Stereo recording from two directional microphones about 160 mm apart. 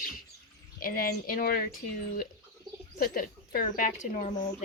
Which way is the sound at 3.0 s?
60° left (ahead or behind).